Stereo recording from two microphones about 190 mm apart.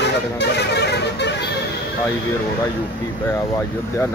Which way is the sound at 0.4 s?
60° left (ahead or behind).